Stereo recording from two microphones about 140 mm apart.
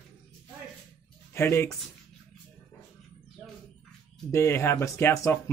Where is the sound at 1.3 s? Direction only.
20° left (ahead or behind).